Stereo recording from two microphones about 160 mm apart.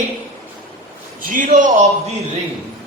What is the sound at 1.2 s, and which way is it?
Speech, 55° right (ahead or behind).